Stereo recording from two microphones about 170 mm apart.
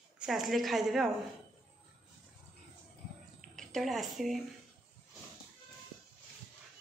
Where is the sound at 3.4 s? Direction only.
Centre (ahead or behind).